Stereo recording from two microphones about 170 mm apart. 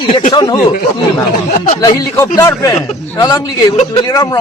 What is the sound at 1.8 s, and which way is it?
A man's voice, 20° left (ahead or behind).